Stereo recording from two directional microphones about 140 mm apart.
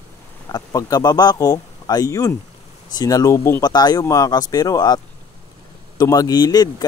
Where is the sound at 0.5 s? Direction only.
25° left (ahead or behind).